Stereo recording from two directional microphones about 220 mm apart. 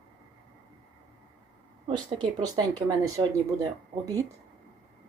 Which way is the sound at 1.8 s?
20° right (ahead or behind).